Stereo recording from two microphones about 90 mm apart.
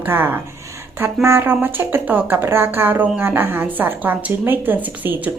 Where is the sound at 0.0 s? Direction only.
20° right (ahead or behind).